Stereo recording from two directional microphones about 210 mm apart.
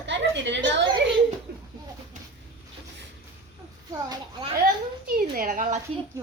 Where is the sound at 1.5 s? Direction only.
50° right (ahead or behind).